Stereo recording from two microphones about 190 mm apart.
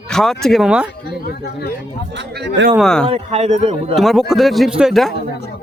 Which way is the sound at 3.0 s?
30° right (ahead or behind).